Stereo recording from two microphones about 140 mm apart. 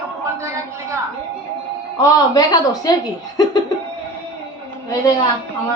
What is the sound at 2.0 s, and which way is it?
Speech, 30° left (ahead or behind).